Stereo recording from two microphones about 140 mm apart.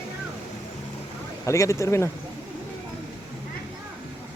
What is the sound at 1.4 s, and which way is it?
Speech, 20° left (ahead or behind).